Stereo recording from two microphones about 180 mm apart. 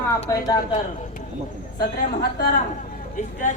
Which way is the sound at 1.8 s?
60° left (ahead or behind).